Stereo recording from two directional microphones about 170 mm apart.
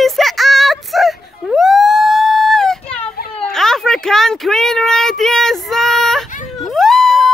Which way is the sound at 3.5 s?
5° left (ahead or behind).